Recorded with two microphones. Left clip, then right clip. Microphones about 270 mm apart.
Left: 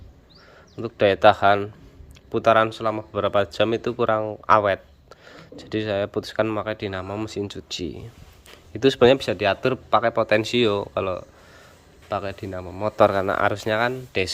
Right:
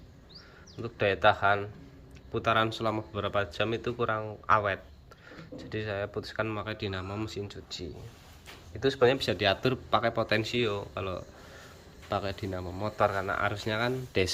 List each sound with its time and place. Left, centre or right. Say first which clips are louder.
0.8 s speech: left 9 dB; left
9.1 s speech: left 6 dB; centre
13.0 s speech: left 9 dB; left; by 14.3 s centre